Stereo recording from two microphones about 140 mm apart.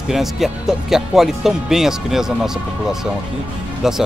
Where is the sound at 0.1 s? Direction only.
Centre (ahead or behind).